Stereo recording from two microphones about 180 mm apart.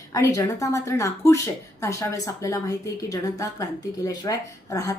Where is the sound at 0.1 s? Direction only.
20° left (ahead or behind).